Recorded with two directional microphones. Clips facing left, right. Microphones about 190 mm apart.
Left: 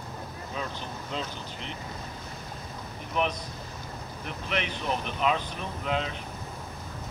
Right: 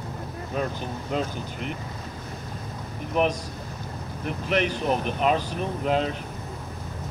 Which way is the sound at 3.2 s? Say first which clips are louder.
Right 5 dB; 40° right (ahead or behind).